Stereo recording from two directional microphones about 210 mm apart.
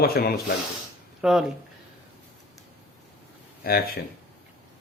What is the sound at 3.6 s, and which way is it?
Speech, 45° left (ahead or behind).